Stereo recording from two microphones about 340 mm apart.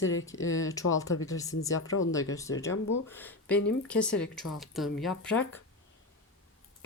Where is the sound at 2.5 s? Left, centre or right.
Left.